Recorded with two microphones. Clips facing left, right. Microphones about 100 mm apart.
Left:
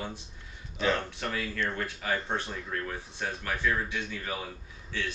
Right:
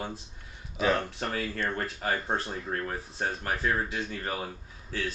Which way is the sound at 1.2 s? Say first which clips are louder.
Right 1 dB; 40° right (ahead or behind).